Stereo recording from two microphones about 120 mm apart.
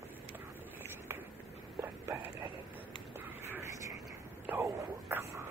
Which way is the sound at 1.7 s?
25° right (ahead or behind).